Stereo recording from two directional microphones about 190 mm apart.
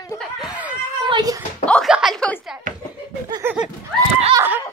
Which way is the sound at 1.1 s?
20° right (ahead or behind).